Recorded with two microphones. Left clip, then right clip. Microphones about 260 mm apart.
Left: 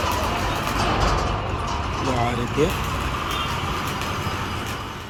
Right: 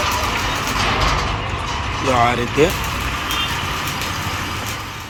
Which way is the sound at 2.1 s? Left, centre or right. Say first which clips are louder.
Right 10 dB; centre.